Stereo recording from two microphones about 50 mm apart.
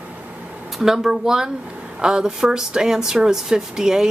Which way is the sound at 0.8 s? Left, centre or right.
Centre.